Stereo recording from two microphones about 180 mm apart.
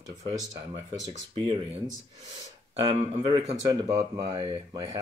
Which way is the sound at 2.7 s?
30° right (ahead or behind).